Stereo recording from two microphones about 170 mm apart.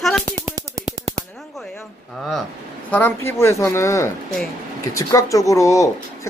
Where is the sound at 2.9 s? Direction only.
15° left (ahead or behind).